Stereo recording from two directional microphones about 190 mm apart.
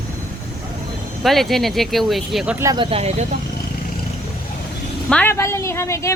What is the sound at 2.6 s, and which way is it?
Speech, 20° right (ahead or behind).